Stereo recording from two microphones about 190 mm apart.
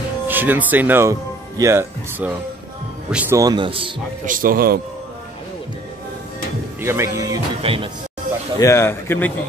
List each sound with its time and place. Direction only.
0.3 s a man's voice: 10° right (ahead or behind); by 3.9 s 25° right (ahead or behind)
4.3 s a man's voice: 50° right (ahead or behind)
6.8 s speech: 15° right (ahead or behind)
7.6 s a man's voice: 30° right (ahead or behind)
8.5 s a man's voice: 15° left (ahead or behind)